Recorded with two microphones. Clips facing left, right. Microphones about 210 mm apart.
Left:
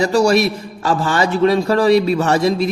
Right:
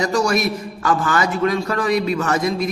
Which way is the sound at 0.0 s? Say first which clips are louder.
Left 5 dB; 30° left (ahead or behind).